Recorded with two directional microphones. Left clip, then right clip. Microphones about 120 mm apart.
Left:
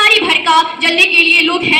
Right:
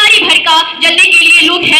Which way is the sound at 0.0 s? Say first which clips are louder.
Right 4 dB; 25° right (ahead or behind).